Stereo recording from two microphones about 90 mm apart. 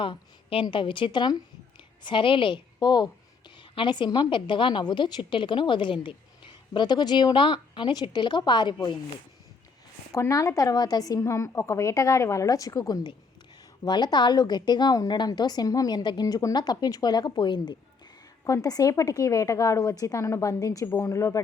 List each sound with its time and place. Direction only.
0.0 s a woman's voice: 70° left (ahead or behind)
2.0 s a woman's voice: 70° left (ahead or behind)
2.8 s a woman's voice: 50° left (ahead or behind)
10.1 s a woman's voice: 35° left (ahead or behind); by 17.7 s 60° left (ahead or behind)
18.4 s a woman's voice: 40° left (ahead or behind)